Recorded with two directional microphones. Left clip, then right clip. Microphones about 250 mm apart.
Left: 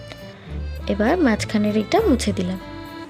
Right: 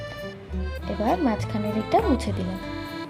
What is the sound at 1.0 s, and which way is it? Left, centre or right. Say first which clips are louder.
A woman's voice: left 4 dB; left.